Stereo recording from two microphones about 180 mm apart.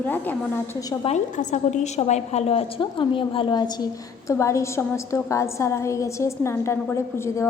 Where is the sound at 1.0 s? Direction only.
40° left (ahead or behind).